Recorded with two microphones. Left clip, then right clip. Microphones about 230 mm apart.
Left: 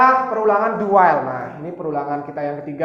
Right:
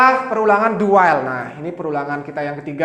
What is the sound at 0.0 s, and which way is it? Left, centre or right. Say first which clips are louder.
Speech: right 1 dB; right.